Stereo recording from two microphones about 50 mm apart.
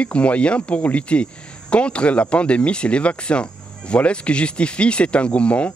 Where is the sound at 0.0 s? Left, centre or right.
Left.